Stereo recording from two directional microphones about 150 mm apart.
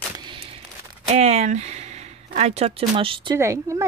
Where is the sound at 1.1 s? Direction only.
45° right (ahead or behind).